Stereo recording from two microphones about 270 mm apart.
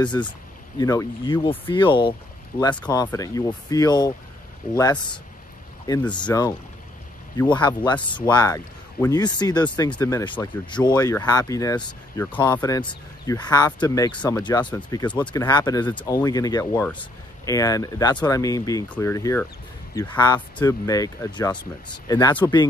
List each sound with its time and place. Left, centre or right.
0.2 s speech: centre